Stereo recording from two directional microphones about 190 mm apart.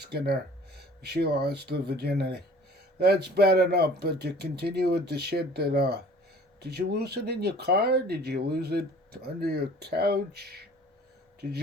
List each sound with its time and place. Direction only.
0.0 s speech: 55° right (ahead or behind)